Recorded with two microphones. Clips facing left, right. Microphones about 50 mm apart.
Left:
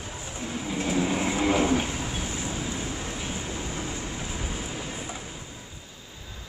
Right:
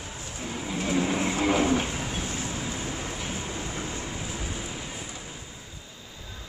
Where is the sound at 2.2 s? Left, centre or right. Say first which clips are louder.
Even; centre.